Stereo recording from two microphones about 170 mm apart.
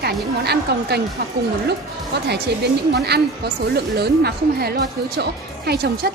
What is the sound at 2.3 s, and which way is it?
A woman's voice, 75° right (ahead or behind).